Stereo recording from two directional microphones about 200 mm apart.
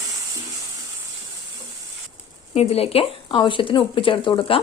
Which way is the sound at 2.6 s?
30° left (ahead or behind).